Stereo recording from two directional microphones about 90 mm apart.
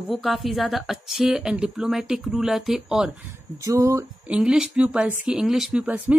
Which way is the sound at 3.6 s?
35° right (ahead or behind).